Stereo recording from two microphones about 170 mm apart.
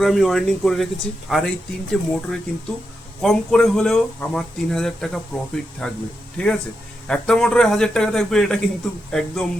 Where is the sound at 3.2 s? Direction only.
Centre (ahead or behind).